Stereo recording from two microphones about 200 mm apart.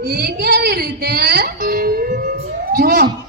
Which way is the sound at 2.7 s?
50° right (ahead or behind).